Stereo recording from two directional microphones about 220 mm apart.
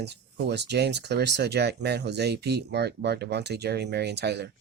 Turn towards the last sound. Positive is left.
turn(degrees=-50)  # may be behind; listen again after turning